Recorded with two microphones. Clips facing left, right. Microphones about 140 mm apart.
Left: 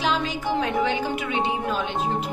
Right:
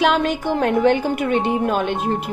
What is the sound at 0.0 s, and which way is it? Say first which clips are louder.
Speech: right 7 dB; 60° right (ahead or behind).